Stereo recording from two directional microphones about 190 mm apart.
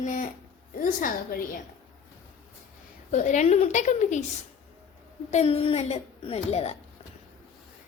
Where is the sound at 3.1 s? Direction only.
40° left (ahead or behind).